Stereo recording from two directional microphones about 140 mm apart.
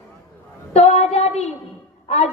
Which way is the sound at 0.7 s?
50° left (ahead or behind).